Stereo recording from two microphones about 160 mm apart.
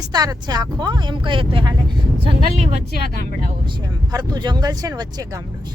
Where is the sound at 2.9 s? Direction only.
90° left.